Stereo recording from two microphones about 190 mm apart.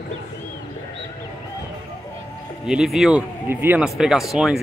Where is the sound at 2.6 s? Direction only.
5° right (ahead or behind).